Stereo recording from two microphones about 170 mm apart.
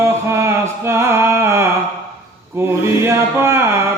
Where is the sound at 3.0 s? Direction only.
15° right (ahead or behind).